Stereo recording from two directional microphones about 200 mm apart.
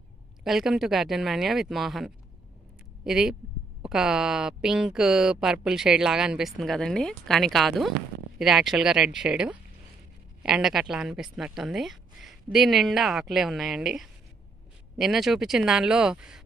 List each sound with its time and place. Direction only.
0.4 s speech: centre (ahead or behind)